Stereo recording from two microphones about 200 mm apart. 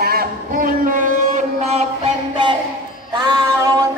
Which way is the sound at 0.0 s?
50° right (ahead or behind).